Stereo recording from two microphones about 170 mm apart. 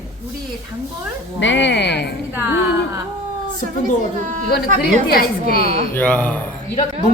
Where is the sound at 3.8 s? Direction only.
50° right (ahead or behind).